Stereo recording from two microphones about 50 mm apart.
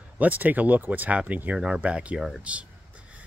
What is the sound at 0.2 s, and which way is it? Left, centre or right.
Speech, right.